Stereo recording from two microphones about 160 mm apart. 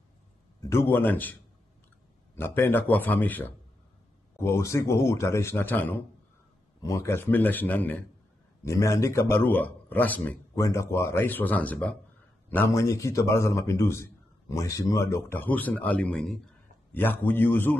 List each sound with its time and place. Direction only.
0.6 s a man's voice: 15° left (ahead or behind)
2.3 s a man's voice: 15° left (ahead or behind)